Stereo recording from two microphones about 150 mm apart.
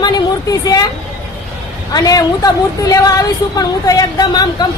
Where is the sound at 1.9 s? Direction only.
25° left (ahead or behind).